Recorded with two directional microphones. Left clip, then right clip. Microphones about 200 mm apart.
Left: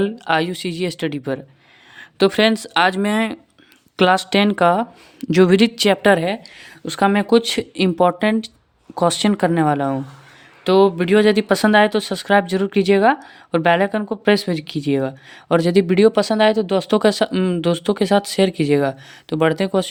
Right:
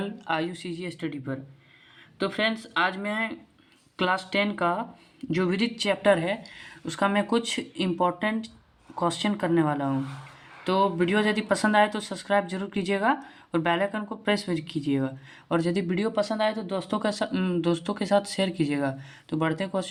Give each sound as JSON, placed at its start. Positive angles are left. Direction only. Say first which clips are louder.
{"t": 0.0, "sound": "a woman's voice", "louder": "left 10 dB", "side_deg": 45}